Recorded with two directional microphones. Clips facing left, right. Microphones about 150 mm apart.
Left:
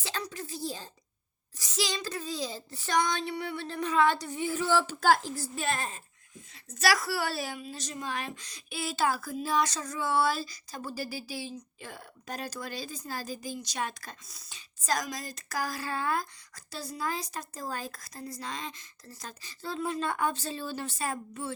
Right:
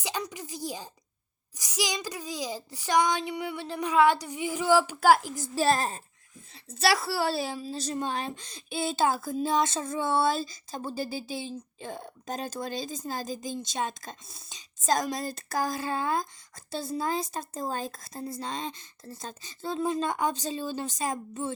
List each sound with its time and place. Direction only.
0.0 s a woman's voice: 15° right (ahead or behind)
5.5 s a woman's voice: 35° right (ahead or behind); by 21.5 s 20° right (ahead or behind)